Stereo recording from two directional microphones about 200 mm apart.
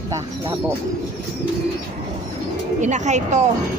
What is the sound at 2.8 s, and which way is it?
Speech, 35° right (ahead or behind).